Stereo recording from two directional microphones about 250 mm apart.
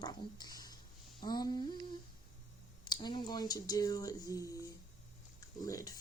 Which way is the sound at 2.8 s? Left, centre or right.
Centre.